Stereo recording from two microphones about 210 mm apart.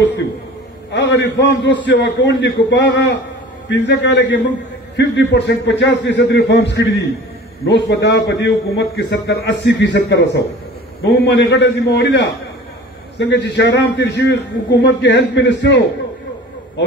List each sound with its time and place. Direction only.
0.9 s a man's voice: 55° left (ahead or behind)